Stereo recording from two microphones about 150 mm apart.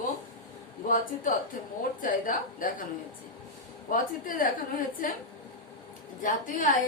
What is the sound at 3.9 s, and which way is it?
A woman's voice, 65° left (ahead or behind).